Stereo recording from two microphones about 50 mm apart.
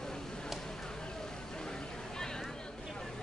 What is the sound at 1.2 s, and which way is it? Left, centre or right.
Vehicle, centre.